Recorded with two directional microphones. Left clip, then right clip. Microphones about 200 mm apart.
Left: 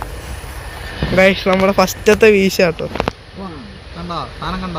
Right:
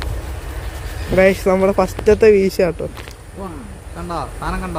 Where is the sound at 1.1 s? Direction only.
5° right (ahead or behind).